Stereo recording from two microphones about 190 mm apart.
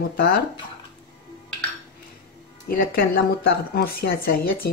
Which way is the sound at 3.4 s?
55° left (ahead or behind).